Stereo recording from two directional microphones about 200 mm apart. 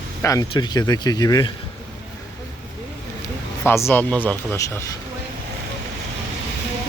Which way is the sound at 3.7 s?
10° left (ahead or behind).